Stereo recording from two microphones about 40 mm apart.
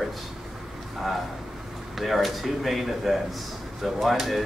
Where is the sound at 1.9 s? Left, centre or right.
Centre.